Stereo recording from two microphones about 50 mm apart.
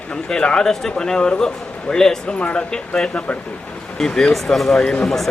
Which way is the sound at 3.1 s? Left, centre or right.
Left.